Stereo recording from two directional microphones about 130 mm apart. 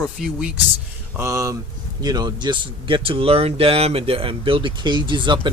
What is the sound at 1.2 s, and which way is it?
Speech, 25° right (ahead or behind).